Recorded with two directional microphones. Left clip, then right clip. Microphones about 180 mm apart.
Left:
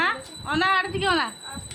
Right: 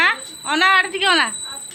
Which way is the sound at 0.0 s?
5° right (ahead or behind).